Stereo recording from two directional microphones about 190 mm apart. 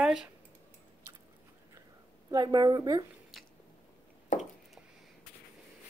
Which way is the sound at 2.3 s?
20° right (ahead or behind).